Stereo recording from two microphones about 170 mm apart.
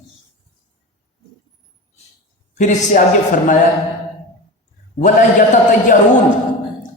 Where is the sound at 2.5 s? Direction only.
50° left (ahead or behind).